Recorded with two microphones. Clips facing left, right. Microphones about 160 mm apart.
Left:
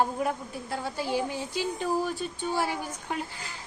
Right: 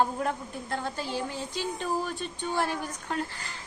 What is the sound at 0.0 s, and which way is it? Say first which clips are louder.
A woman's voice: even; 10° left (ahead or behind).